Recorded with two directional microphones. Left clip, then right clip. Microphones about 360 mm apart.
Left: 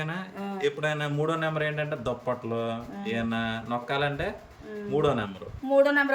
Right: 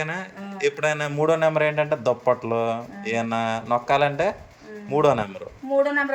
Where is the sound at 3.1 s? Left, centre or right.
Centre.